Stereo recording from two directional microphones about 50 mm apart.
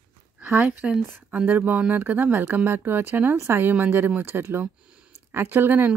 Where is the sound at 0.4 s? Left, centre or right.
Right.